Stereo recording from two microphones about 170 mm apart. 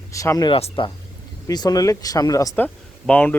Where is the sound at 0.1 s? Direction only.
20° left (ahead or behind).